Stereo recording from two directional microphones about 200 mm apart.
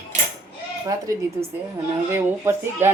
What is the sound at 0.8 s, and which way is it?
Speech, 15° right (ahead or behind).